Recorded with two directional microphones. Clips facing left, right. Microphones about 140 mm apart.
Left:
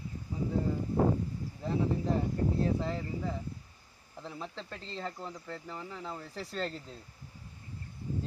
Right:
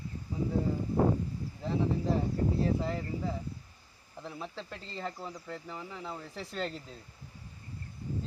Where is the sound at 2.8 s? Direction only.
5° right (ahead or behind).